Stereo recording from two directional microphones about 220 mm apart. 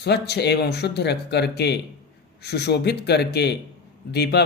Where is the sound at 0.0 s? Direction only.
50° left (ahead or behind).